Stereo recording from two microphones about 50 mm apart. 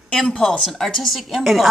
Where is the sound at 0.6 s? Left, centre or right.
Centre.